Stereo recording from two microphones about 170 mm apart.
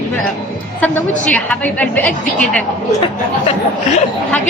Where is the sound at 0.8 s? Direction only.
10° left (ahead or behind).